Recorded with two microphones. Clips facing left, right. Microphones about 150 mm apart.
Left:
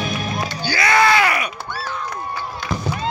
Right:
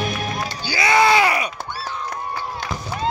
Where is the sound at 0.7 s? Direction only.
20° right (ahead or behind).